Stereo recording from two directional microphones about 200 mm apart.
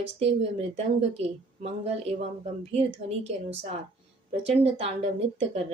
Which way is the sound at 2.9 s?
60° right (ahead or behind).